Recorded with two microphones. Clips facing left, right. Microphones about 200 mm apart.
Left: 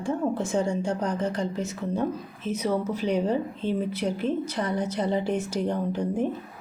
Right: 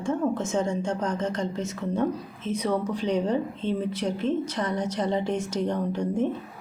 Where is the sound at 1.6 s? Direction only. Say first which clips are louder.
Right 1 dB; 10° left (ahead or behind).